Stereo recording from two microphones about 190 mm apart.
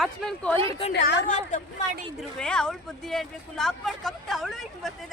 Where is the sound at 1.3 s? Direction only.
40° left (ahead or behind).